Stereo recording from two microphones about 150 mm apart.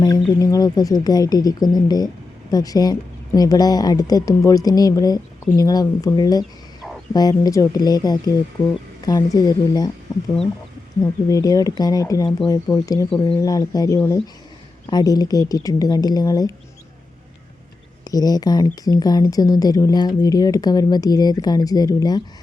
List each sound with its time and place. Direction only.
0.0 s speech: 25° left (ahead or behind)
11.0 s speech: 25° left (ahead or behind)
18.0 s speech: 25° left (ahead or behind)